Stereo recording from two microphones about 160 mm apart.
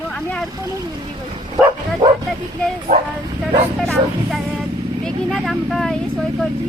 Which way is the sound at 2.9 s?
70° right (ahead or behind).